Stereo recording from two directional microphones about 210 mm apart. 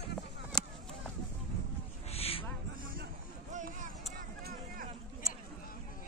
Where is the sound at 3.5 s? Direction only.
35° right (ahead or behind).